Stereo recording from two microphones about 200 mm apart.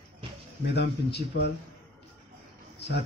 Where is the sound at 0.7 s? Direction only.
55° left (ahead or behind).